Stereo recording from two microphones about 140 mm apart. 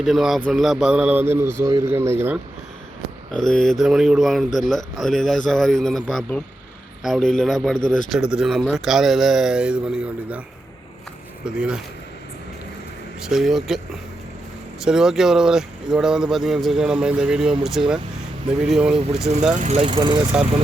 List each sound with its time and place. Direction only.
0.0 s speech: centre (ahead or behind)
3.3 s speech: 5° left (ahead or behind)
11.4 s speech: 5° right (ahead or behind)
13.2 s speech: 5° right (ahead or behind)
19.5 s speech: 55° right (ahead or behind)
19.8 s speech: 40° right (ahead or behind)